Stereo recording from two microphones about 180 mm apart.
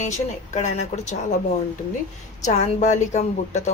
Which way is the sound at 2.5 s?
40° left (ahead or behind).